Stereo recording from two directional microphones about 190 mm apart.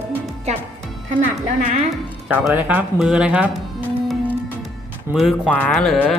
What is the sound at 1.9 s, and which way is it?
Speech, 5° right (ahead or behind).